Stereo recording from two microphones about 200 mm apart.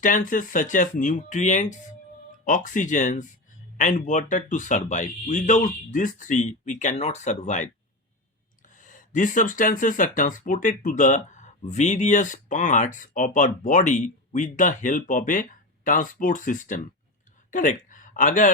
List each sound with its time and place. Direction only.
0.0 s speech: 40° left (ahead or behind)